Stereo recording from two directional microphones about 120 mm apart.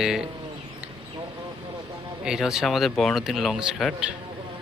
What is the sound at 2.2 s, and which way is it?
Speech, 5° right (ahead or behind).